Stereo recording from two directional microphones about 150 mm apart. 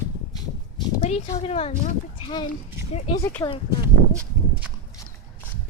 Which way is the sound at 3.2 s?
15° left (ahead or behind).